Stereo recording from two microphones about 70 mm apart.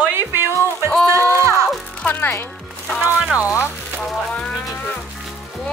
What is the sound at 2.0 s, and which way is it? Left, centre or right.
Speech, left.